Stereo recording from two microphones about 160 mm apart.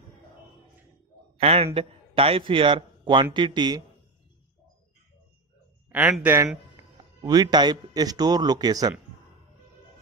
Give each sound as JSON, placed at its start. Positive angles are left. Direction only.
{"t": 1.4, "sound": "a man's voice", "side_deg": -40}
{"t": 5.9, "sound": "a sound", "side_deg": -10}
{"t": 6.2, "sound": "a man's voice", "side_deg": -15}